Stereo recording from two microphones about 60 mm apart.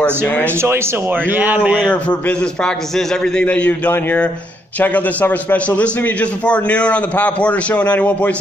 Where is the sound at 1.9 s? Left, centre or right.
Left.